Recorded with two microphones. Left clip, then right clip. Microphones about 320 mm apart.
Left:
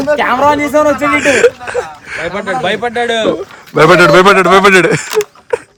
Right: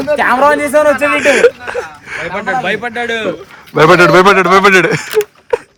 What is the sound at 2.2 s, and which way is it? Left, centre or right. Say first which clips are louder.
A man's voice: even; left.